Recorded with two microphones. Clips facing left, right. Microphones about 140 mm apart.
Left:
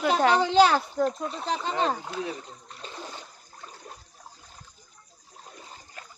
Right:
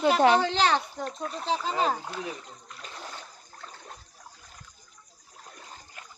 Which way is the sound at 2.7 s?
25° left (ahead or behind).